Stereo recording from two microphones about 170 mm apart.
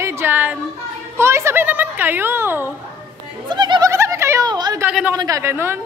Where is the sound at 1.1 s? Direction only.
15° right (ahead or behind).